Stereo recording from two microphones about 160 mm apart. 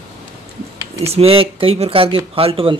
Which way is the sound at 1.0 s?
40° right (ahead or behind).